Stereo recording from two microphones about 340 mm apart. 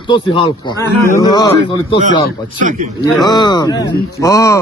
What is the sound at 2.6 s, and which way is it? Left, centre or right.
Speech, right.